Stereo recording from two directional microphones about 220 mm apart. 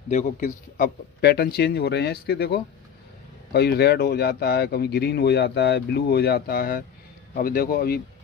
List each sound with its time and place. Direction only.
0.1 s speech: 35° left (ahead or behind)